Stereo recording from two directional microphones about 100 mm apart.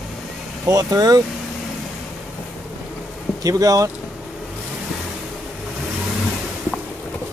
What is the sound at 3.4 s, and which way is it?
Speech, 35° right (ahead or behind).